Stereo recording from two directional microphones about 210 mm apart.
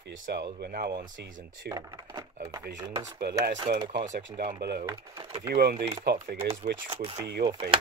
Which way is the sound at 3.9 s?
35° right (ahead or behind).